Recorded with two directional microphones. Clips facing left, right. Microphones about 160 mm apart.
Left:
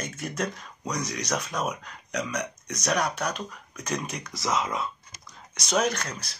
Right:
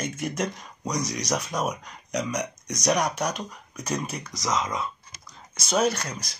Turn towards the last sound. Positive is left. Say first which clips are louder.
# right 3 dB
turn(degrees=-10)  # may be behind; listen again after turning